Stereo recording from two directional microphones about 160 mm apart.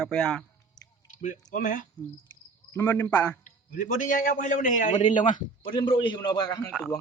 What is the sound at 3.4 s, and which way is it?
A man's voice, 55° left (ahead or behind).